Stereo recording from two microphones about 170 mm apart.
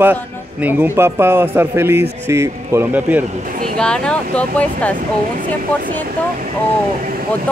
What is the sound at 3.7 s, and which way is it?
Speech, 5° left (ahead or behind).